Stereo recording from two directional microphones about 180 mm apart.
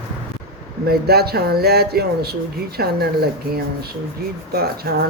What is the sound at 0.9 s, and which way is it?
Speech, 60° right (ahead or behind).